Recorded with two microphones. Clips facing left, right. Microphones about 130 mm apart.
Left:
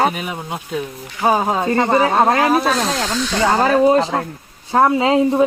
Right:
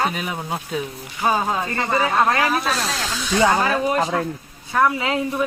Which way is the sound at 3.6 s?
35° left (ahead or behind).